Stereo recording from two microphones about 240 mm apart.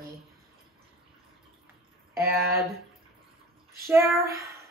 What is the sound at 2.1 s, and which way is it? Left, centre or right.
Speech, centre.